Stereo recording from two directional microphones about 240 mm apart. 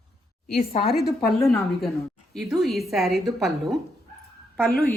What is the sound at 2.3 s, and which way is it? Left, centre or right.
Speech, centre.